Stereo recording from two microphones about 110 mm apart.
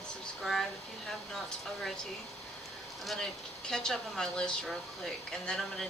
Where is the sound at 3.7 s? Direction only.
5° left (ahead or behind).